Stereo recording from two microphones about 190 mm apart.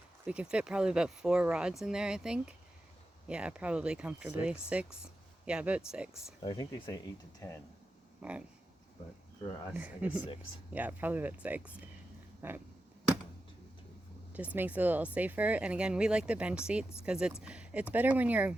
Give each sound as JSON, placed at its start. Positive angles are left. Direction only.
{"t": 0.3, "sound": "speech", "side_deg": -5}
{"t": 6.4, "sound": "speech", "side_deg": 25}
{"t": 8.2, "sound": "speech", "side_deg": -5}
{"t": 9.7, "sound": "speech", "side_deg": -10}
{"t": 12.4, "sound": "a sound", "side_deg": -10}
{"t": 14.3, "sound": "speech", "side_deg": -10}